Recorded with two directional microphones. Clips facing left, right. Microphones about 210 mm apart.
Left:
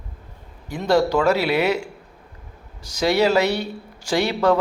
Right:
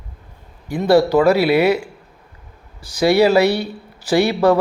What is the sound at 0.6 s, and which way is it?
A man's voice, 10° right (ahead or behind).